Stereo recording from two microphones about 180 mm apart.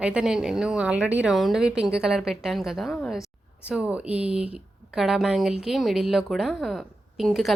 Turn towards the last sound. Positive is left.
turn(degrees=0)  # may be behind; listen again after turning